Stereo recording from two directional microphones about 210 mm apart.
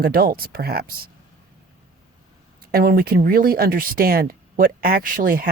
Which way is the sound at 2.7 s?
45° right (ahead or behind).